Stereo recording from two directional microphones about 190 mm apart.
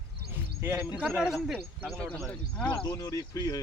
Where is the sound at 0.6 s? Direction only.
10° right (ahead or behind).